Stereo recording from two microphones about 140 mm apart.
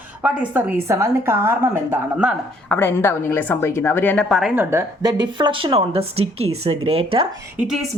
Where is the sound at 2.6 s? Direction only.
15° left (ahead or behind); by 4.5 s centre (ahead or behind).